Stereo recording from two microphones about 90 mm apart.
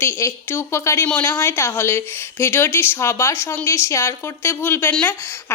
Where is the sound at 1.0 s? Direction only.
20° left (ahead or behind).